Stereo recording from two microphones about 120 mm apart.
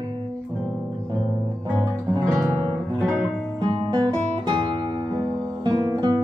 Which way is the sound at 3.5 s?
40° right (ahead or behind).